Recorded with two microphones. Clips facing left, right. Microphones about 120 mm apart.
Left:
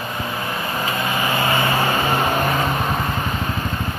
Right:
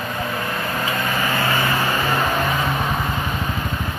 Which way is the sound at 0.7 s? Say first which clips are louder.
Left 1 dB; 15° left (ahead or behind).